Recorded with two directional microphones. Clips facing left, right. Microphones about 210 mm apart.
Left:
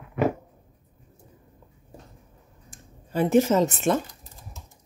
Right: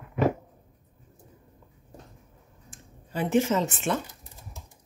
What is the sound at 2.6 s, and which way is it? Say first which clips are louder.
Speech: left 1 dB; 40° left (ahead or behind).